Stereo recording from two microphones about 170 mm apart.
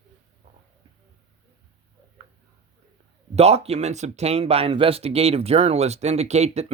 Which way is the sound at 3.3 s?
40° right (ahead or behind).